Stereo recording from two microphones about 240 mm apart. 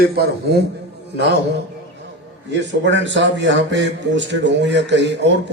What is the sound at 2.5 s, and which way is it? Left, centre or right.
A man's voice, right.